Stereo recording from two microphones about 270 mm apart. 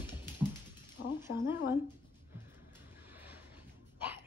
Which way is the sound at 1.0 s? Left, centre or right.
Left.